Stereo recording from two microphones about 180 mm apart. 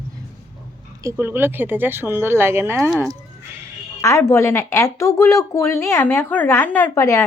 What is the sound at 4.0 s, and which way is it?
Speech, 15° left (ahead or behind).